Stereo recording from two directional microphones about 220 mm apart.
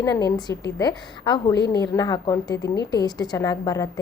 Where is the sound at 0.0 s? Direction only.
15° left (ahead or behind).